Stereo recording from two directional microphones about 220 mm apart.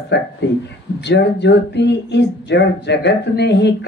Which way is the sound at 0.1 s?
50° left (ahead or behind).